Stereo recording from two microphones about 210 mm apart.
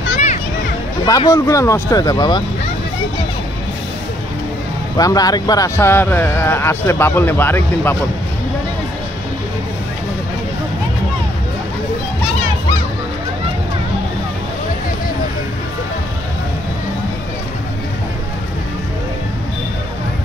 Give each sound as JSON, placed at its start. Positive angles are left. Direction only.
{"t": 1.0, "sound": "speech", "side_deg": 15}
{"t": 4.9, "sound": "speech", "side_deg": 15}